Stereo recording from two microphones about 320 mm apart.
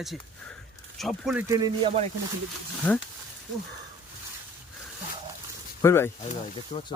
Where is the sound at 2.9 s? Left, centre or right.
Centre.